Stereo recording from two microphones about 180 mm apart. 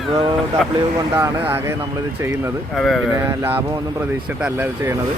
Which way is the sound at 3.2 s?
15° right (ahead or behind).